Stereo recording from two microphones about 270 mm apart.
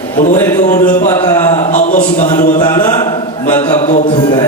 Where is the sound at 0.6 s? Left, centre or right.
Left.